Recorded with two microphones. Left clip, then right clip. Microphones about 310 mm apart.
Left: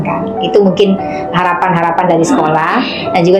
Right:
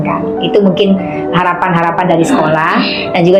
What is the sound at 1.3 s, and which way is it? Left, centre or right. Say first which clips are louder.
A woman's voice: even; centre.